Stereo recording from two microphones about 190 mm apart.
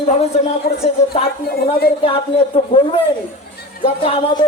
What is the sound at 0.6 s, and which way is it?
A woman's voice, 50° left (ahead or behind).